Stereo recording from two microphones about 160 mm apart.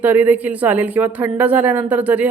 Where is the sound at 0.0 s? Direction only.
10° right (ahead or behind).